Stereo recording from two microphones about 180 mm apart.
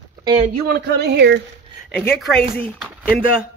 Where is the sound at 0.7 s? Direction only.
65° right (ahead or behind).